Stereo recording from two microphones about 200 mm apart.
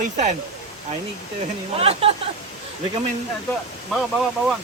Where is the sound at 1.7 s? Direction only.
30° right (ahead or behind).